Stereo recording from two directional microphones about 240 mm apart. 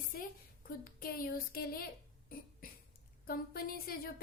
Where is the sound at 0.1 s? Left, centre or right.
Left.